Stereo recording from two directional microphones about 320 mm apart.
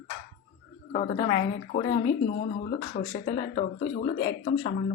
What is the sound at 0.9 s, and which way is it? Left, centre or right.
Speech, left.